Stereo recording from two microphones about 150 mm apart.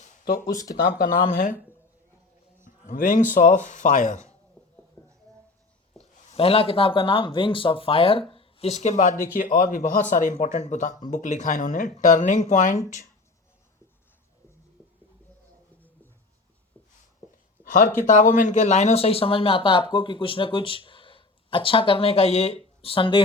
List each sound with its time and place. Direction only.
0.0 s a sound: 65° left (ahead or behind)
0.8 s speech: 75° left (ahead or behind)
2.6 s speech: 65° left (ahead or behind)
6.0 s speech: 40° left (ahead or behind)
17.6 s a sound: 65° left (ahead or behind)
18.0 s speech: 60° left (ahead or behind); by 23.2 s 35° left (ahead or behind)